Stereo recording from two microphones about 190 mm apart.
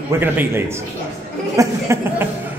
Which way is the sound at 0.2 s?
10° right (ahead or behind).